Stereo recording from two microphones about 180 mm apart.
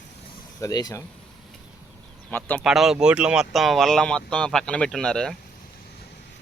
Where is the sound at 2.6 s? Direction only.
5° right (ahead or behind).